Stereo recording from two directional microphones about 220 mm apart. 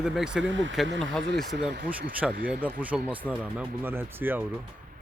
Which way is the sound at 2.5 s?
5° right (ahead or behind).